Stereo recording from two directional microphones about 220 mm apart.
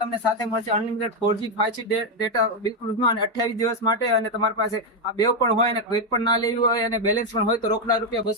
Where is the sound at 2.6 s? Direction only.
15° left (ahead or behind).